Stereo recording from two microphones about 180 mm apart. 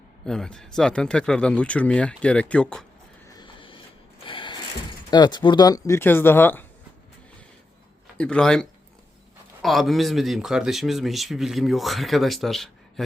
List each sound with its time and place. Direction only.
0.3 s a man's voice: 5° left (ahead or behind)
3.3 s a sound: 25° left (ahead or behind)
4.3 s mechanisms: 25° left (ahead or behind)
5.1 s speech: 25° left (ahead or behind)
8.2 s a man's voice: 5° left (ahead or behind)